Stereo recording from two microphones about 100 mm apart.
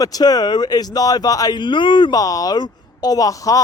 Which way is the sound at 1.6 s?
55° left (ahead or behind).